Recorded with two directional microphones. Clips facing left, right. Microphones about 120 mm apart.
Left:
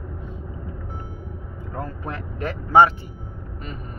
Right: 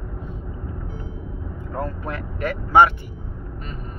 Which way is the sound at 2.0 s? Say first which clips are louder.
Right 2 dB; 30° left (ahead or behind).